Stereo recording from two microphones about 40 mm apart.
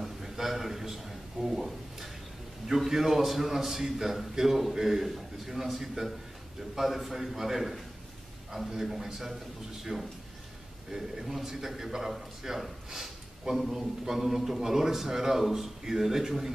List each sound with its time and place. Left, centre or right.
0.0 s a sound: centre
2.7 s a man's voice: centre
9.9 s a man's voice: centre